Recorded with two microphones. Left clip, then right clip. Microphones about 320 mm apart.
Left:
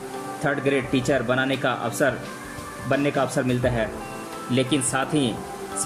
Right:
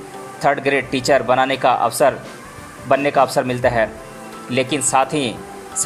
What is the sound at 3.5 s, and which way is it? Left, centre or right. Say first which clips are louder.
Speech: right 7 dB; centre.